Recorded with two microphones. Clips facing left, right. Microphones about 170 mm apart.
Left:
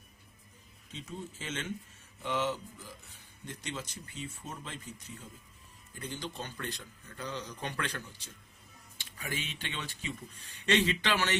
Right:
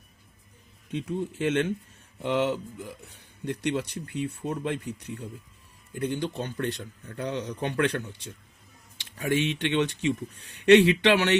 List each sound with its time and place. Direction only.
0.9 s speech: 60° right (ahead or behind)